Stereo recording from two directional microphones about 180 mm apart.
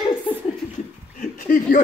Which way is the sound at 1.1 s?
50° left (ahead or behind).